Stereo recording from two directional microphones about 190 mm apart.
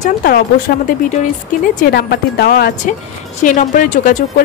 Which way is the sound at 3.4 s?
45° left (ahead or behind).